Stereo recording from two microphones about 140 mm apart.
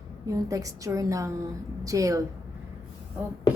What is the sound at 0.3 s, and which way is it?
A woman's voice, 25° right (ahead or behind).